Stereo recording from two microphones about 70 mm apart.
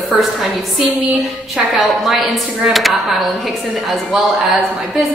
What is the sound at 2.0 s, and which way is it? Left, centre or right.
A woman's voice, centre.